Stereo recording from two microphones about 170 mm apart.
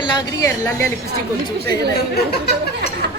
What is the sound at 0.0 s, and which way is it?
Speech, 20° left (ahead or behind).